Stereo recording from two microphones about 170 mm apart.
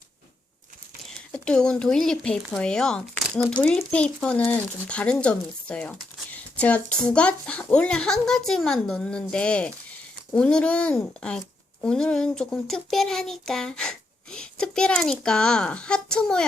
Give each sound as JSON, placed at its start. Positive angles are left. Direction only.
{"t": 1.3, "sound": "speech", "side_deg": 5}